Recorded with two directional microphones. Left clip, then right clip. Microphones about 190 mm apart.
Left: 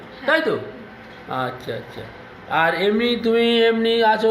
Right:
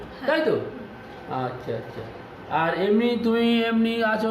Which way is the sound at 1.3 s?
15° left (ahead or behind).